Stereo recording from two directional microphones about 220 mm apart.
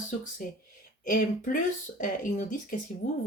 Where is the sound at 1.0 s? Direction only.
40° left (ahead or behind).